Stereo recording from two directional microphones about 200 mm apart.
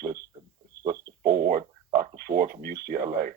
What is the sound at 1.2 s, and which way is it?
Speech, 50° right (ahead or behind).